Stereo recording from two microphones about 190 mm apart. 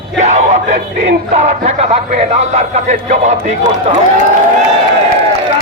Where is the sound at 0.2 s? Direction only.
40° right (ahead or behind).